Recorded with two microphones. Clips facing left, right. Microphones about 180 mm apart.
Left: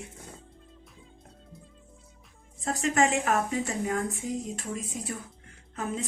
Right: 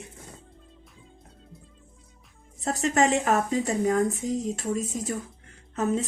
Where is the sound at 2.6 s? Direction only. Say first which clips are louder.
Right 2 dB; 40° right (ahead or behind).